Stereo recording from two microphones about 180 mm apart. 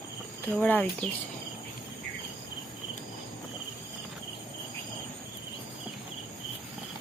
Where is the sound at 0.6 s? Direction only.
10° left (ahead or behind).